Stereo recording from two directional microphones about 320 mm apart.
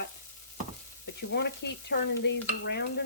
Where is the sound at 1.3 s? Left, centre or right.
Left.